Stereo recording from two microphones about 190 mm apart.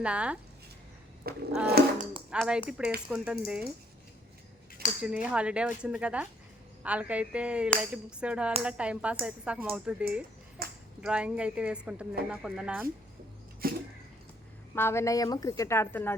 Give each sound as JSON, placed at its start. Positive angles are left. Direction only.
{"t": 0.0, "sound": "speech", "side_deg": -5}
{"t": 1.2, "sound": "a sound", "side_deg": -55}
{"t": 1.6, "sound": "speech", "side_deg": -55}
{"t": 2.3, "sound": "speech", "side_deg": -5}
{"t": 4.9, "sound": "speech", "side_deg": -5}
{"t": 10.6, "sound": "a sound", "side_deg": -55}
{"t": 11.0, "sound": "speech", "side_deg": -5}
{"t": 13.6, "sound": "a sound", "side_deg": -50}
{"t": 14.8, "sound": "a woman's voice", "side_deg": 15}